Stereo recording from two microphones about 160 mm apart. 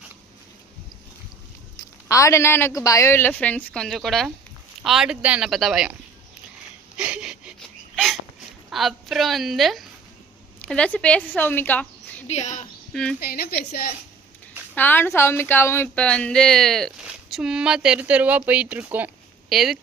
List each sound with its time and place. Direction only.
2.0 s a man's voice: 20° left (ahead or behind); by 5.9 s centre (ahead or behind)
6.9 s a sound: 5° right (ahead or behind)
7.9 s hiccup: centre (ahead or behind)
8.7 s speech: centre (ahead or behind)
12.3 s speech: 45° left (ahead or behind)
12.9 s speech: 5° left (ahead or behind)
13.1 s speech: 70° left (ahead or behind)
14.8 s speech: 10° left (ahead or behind)